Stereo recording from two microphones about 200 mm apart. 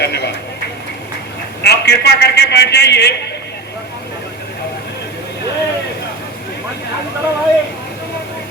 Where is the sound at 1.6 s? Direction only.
55° left (ahead or behind).